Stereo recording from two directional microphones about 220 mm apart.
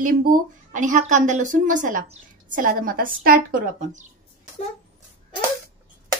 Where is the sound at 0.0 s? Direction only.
40° right (ahead or behind).